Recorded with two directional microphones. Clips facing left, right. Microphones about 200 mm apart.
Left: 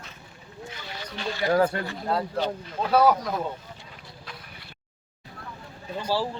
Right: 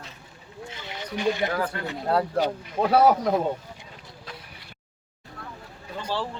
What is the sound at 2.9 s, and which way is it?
Speech, 25° right (ahead or behind).